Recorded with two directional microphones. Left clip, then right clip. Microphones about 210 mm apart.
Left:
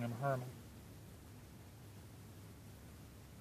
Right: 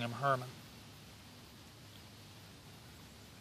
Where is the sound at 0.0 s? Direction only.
15° right (ahead or behind).